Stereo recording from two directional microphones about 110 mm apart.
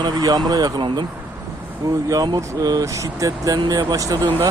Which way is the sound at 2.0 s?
35° right (ahead or behind).